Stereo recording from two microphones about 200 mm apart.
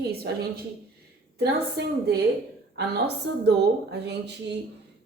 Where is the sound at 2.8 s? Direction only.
55° right (ahead or behind).